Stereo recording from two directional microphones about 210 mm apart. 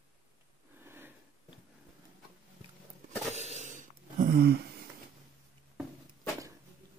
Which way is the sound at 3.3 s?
30° right (ahead or behind).